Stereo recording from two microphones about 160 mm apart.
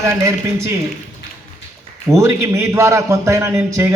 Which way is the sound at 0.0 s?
20° right (ahead or behind).